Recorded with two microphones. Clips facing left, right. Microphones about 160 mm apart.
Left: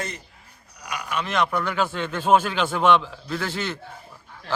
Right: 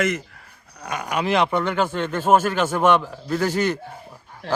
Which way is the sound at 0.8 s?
50° right (ahead or behind).